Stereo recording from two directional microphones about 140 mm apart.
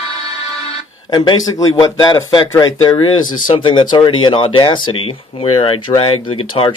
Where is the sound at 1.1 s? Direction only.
30° left (ahead or behind).